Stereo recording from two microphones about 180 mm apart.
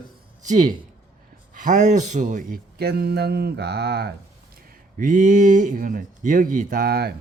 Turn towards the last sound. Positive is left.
turn(degrees=-60)  # may be behind; listen again after turning